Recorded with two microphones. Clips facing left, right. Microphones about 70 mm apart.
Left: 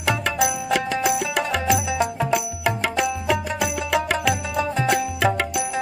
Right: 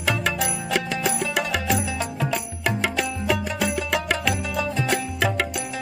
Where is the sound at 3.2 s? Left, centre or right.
Centre.